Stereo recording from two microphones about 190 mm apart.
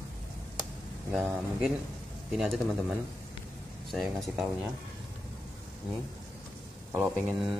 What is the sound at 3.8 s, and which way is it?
Speech, centre (ahead or behind).